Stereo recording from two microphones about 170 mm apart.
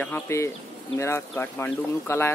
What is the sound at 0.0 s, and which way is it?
Speech, 15° left (ahead or behind).